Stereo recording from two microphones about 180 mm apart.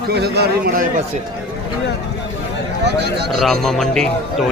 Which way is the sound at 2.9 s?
65° right (ahead or behind).